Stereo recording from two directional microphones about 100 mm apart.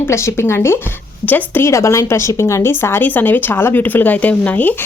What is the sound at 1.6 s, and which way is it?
Speech, 30° left (ahead or behind).